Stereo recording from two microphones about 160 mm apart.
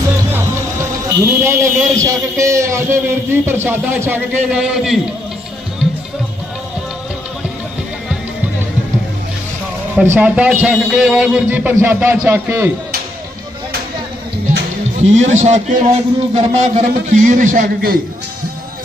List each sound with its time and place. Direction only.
0.3 s a man's voice: 15° right (ahead or behind)
4.4 s a man's voice: 5° right (ahead or behind)
9.9 s a man's voice: 10° right (ahead or behind)
15.0 s a man's voice: 45° right (ahead or behind); by 18.0 s 65° right (ahead or behind)